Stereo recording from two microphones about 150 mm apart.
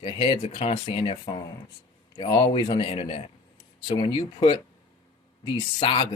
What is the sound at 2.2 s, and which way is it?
Speech, 25° left (ahead or behind).